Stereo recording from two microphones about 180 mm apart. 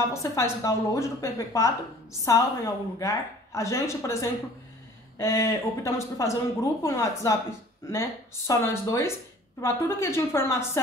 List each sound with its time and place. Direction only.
0.1 s speech: 15° left (ahead or behind)